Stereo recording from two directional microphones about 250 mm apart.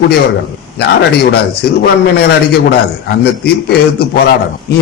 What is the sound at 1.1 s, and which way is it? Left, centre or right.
A man's voice, left.